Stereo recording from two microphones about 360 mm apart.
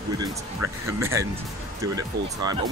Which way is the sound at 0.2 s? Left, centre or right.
Centre.